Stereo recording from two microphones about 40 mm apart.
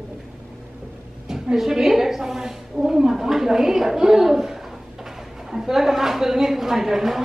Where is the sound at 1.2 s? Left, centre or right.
Centre.